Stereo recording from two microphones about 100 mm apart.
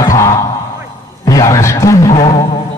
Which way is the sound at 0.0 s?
30° left (ahead or behind).